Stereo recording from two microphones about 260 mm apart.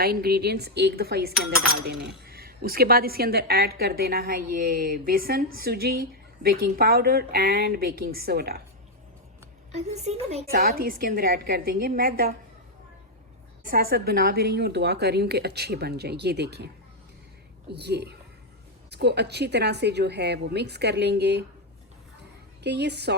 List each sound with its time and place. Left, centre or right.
0.0 s speech: right
9.7 s a woman's voice: right
10.5 s speech: right
13.7 s speech: right
17.7 s speech: right
22.6 s speech: right